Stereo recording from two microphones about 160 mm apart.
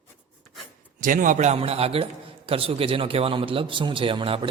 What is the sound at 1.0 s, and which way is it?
A man's voice, 55° right (ahead or behind).